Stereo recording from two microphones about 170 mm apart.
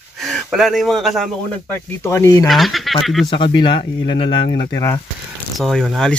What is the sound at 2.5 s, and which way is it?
Speech, centre (ahead or behind).